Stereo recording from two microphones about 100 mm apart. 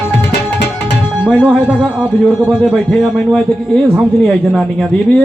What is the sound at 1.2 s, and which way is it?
A man's voice, 10° right (ahead or behind).